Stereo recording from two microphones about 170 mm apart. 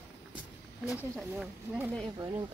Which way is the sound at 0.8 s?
5° right (ahead or behind).